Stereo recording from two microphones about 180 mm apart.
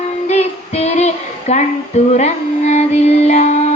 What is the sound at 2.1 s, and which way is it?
Music, 40° left (ahead or behind).